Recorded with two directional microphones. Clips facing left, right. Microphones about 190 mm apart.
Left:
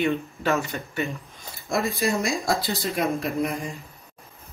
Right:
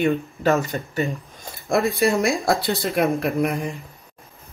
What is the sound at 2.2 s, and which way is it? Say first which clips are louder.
Speech: right 5 dB; 60° right (ahead or behind).